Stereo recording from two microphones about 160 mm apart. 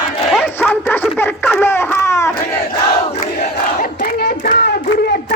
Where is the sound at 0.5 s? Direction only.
15° left (ahead or behind).